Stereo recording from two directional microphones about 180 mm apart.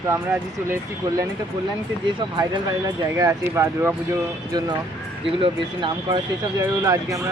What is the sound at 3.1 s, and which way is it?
Speech, 15° right (ahead or behind).